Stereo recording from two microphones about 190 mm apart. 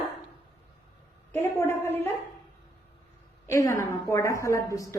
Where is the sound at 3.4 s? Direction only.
15° left (ahead or behind).